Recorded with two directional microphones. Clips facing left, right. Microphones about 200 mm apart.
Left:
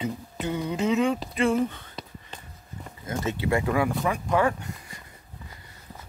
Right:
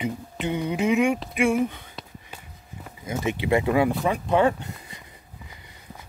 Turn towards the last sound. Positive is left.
turn(degrees=-20)  # may be behind; listen again after turning